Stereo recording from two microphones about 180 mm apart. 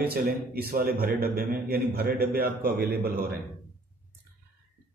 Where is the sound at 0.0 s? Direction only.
55° right (ahead or behind).